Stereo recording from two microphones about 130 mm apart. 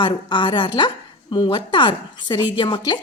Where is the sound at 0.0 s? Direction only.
35° left (ahead or behind).